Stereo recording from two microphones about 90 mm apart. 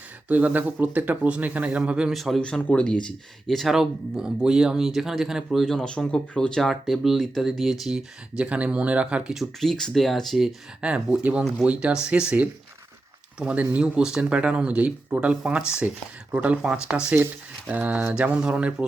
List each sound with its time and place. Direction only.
0.3 s speech: 20° right (ahead or behind); by 2.4 s centre (ahead or behind)
2.4 s speech: 10° left (ahead or behind); by 9.4 s 10° right (ahead or behind)
9.4 s speech: 5° left (ahead or behind)
10.8 s speech: 10° right (ahead or behind)
17.7 s speech: 15° right (ahead or behind)